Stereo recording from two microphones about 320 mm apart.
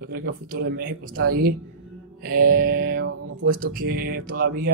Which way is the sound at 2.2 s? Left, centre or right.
Right.